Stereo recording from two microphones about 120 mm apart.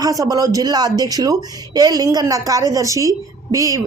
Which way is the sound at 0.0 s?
30° right (ahead or behind).